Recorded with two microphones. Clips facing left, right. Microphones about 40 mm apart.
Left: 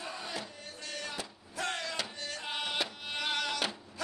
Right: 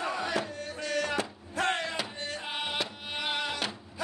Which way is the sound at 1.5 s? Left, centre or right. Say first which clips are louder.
Right 6 dB; right.